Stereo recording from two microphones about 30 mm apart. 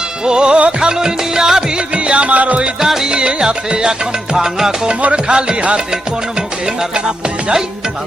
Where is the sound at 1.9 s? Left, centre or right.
Right.